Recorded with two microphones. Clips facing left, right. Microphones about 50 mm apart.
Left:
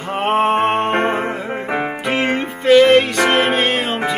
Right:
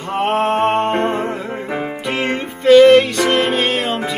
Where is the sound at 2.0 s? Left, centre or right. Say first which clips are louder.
Left 2 dB; centre.